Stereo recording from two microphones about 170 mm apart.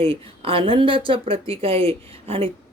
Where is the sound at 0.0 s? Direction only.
35° right (ahead or behind).